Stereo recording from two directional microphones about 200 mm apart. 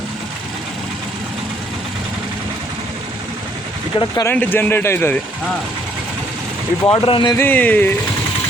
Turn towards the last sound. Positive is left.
turn(degrees=10)  # may be behind; listen again after turning